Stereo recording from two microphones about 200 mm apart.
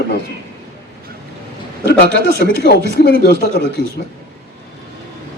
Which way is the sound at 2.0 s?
50° right (ahead or behind).